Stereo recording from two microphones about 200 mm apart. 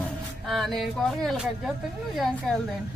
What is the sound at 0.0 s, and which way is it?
A woman's voice, centre (ahead or behind).